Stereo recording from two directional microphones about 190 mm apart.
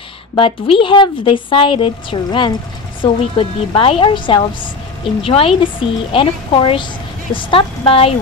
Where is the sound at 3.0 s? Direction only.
25° left (ahead or behind).